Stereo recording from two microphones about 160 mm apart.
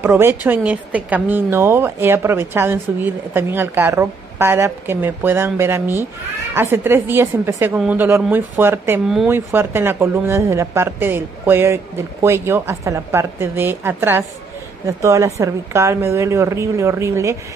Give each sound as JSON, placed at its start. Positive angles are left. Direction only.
{"t": 0.0, "sound": "a woman's voice", "side_deg": -15}
{"t": 9.0, "sound": "speech", "side_deg": -5}
{"t": 9.3, "sound": "a woman's voice", "side_deg": -15}